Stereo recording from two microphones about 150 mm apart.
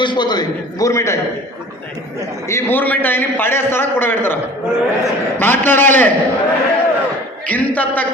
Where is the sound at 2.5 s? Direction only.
15° left (ahead or behind).